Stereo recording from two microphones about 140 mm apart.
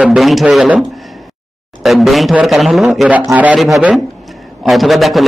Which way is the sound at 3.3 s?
10° right (ahead or behind).